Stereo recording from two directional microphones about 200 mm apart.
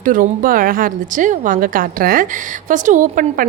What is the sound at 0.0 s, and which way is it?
A woman's voice, 40° right (ahead or behind).